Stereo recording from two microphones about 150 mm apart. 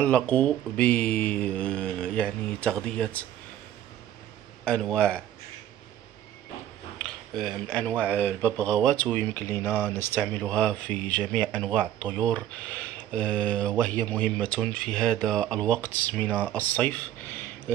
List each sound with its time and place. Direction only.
0.0 s speech: 10° left (ahead or behind)
4.6 s speech: 5° left (ahead or behind)
7.0 s speech: 5° left (ahead or behind)